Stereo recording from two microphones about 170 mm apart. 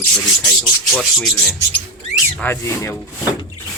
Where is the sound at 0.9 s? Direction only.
Centre (ahead or behind).